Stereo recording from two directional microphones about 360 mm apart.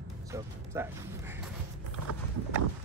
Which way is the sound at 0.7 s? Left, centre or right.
Centre.